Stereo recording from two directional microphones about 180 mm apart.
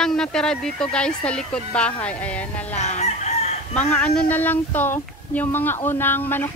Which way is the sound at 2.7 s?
40° left (ahead or behind).